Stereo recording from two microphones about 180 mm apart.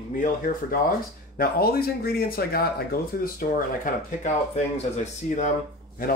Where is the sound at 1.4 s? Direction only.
55° left (ahead or behind).